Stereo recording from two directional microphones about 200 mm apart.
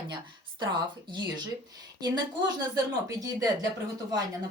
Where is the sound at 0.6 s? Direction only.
20° right (ahead or behind).